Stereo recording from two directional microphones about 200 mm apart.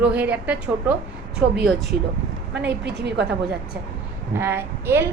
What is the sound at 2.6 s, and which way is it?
Speech, 55° right (ahead or behind).